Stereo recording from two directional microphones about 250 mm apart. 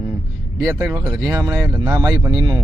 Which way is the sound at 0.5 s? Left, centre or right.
Centre.